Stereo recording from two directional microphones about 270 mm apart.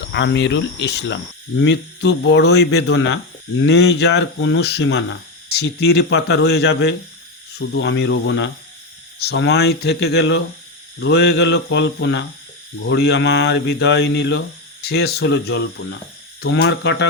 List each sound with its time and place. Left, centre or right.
0.1 s speech: left